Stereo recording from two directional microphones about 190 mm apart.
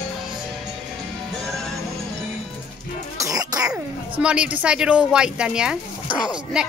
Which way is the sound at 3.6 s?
5° right (ahead or behind).